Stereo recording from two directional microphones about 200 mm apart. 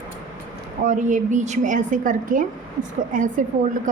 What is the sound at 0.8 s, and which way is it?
A woman's voice, 40° right (ahead or behind).